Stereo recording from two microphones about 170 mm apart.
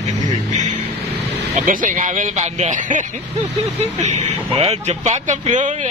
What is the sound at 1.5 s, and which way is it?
Speech, 50° right (ahead or behind).